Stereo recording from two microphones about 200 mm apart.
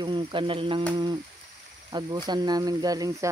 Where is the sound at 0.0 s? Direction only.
25° right (ahead or behind).